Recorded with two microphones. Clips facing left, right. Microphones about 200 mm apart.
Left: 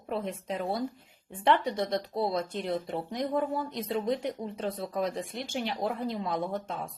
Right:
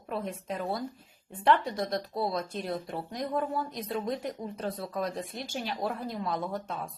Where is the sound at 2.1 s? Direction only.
20° left (ahead or behind).